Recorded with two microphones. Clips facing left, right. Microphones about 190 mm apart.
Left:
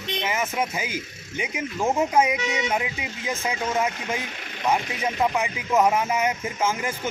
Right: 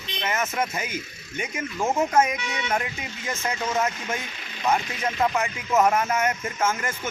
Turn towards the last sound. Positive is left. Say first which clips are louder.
# left 1 dB
turn(degrees=15)  # may be behind; listen again after turning